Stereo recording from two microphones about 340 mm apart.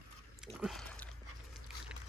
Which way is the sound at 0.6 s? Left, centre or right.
Centre.